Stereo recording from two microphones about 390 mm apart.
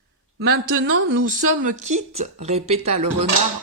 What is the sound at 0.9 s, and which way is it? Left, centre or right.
Speech, right.